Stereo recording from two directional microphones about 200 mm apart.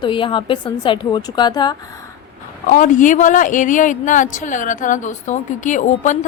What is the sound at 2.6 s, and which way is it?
A woman's voice, 40° left (ahead or behind).